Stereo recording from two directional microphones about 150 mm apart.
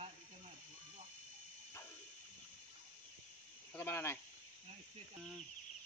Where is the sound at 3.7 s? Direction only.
15° left (ahead or behind).